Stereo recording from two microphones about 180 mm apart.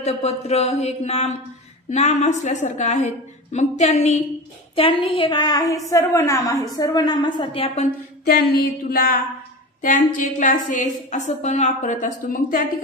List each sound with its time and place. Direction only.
0.0 s a woman's voice: 35° left (ahead or behind)
8.5 s a sound: 55° left (ahead or behind)
9.8 s a woman's voice: 50° left (ahead or behind)